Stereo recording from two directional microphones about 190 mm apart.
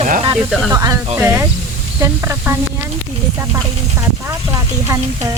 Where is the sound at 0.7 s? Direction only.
20° right (ahead or behind).